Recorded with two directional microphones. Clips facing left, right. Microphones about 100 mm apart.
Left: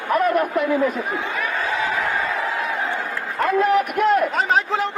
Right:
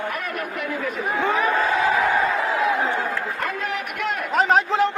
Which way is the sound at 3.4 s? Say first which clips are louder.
Left 9 dB; 40° left (ahead or behind).